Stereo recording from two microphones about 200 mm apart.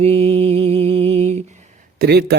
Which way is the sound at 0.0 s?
30° right (ahead or behind).